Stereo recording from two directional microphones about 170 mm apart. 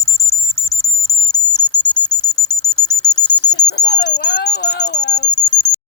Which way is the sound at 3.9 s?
45° left (ahead or behind).